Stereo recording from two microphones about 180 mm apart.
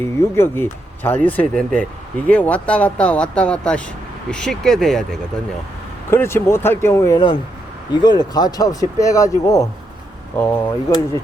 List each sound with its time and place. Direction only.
0.0 s speech: 15° left (ahead or behind)
6.1 s speech: 15° left (ahead or behind)